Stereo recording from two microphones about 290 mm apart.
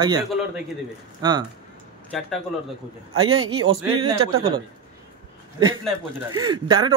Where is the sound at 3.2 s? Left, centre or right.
Right.